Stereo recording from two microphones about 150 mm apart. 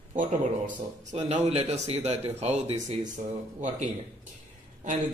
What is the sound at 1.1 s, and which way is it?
Speech, 45° right (ahead or behind).